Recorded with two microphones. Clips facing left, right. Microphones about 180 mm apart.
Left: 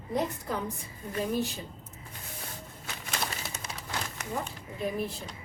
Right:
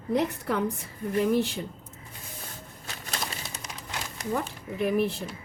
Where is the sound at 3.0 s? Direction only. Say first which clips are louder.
Even; 35° right (ahead or behind).